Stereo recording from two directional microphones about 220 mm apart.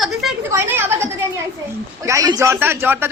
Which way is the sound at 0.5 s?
10° right (ahead or behind).